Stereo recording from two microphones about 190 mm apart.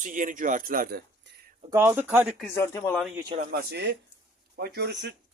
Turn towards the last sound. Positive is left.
turn(degrees=-60)  # may be behind; listen again after turning